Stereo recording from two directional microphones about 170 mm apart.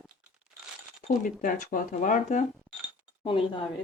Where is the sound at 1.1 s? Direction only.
50° left (ahead or behind).